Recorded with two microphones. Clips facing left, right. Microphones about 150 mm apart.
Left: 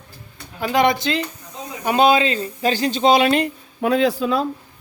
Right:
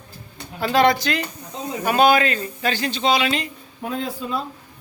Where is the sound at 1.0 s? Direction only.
25° left (ahead or behind); by 3.5 s 55° left (ahead or behind).